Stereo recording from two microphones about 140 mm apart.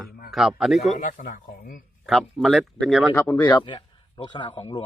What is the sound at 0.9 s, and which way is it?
Speech, 70° left (ahead or behind).